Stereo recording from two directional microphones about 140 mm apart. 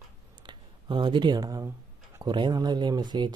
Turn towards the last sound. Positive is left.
turn(degrees=-30)  # may be behind; listen again after turning